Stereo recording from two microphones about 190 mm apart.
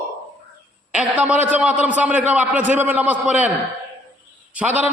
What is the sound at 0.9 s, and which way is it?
A man's voice, 5° right (ahead or behind).